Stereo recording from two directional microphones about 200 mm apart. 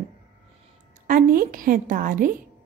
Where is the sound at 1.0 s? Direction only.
45° right (ahead or behind).